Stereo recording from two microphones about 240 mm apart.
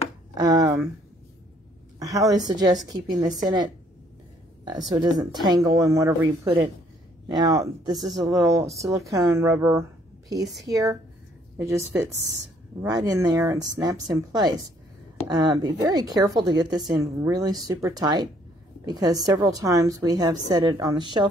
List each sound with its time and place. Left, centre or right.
0.3 s speech: centre
2.0 s a woman's voice: centre
4.6 s a woman's voice: centre
12.8 s a woman's voice: centre